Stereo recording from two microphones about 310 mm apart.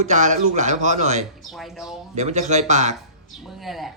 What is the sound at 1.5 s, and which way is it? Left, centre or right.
Speech, centre.